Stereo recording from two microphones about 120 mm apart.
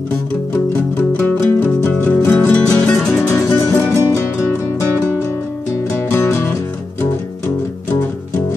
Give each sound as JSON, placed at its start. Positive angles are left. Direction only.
{"t": 1.2, "sound": "music", "side_deg": 15}
{"t": 3.2, "sound": "music", "side_deg": 20}
{"t": 6.1, "sound": "music", "side_deg": 20}